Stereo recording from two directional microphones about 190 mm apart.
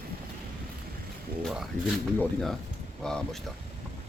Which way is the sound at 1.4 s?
Centre (ahead or behind).